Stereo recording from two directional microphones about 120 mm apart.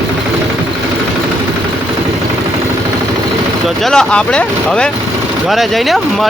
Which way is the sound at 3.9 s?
5° left (ahead or behind).